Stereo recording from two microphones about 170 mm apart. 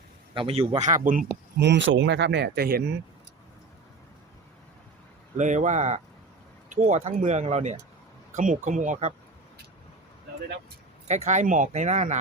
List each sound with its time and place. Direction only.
0.3 s speech: 35° right (ahead or behind); by 1.2 s 50° right (ahead or behind)
1.5 s speech: 90° right; by 2.9 s 70° right (ahead or behind)
5.4 s speech: 45° right (ahead or behind)
11.1 s speech: 45° right (ahead or behind)